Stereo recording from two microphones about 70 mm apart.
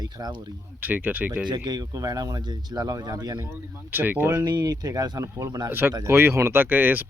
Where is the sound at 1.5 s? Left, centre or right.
Right.